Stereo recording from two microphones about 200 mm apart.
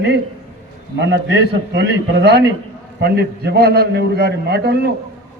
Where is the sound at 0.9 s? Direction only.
65° right (ahead or behind).